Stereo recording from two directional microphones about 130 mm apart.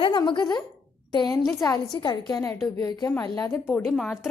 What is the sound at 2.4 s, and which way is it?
Speech, 20° left (ahead or behind).